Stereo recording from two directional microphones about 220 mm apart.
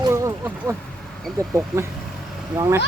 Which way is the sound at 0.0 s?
15° right (ahead or behind).